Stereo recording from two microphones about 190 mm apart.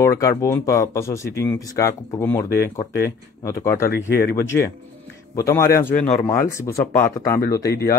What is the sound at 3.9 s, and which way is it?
Speech, 55° left (ahead or behind).